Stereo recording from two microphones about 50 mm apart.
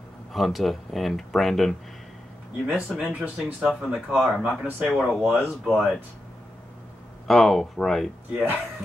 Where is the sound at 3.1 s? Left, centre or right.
Right.